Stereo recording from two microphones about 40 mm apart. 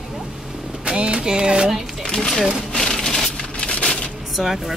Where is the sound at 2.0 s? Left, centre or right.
Centre.